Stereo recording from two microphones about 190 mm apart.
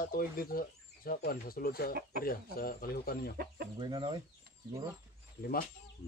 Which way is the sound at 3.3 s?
55° right (ahead or behind).